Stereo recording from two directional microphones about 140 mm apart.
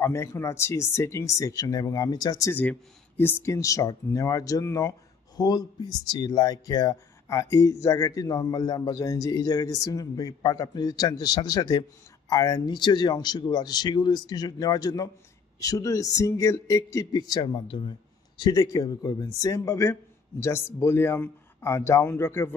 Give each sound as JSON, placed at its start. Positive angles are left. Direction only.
{"t": 0.0, "sound": "speech", "side_deg": 20}
{"t": 2.5, "sound": "speech", "side_deg": 15}